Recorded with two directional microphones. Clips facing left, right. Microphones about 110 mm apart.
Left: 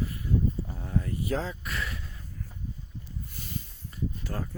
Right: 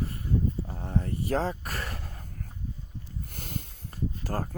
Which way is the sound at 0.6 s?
35° right (ahead or behind).